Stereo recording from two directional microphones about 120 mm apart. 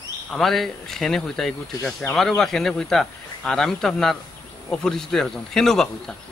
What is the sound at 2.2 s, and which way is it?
A woman's voice, 5° left (ahead or behind).